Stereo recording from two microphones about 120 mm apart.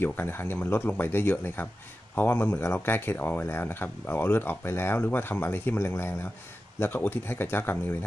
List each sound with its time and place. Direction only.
0.0 s speech: 15° left (ahead or behind)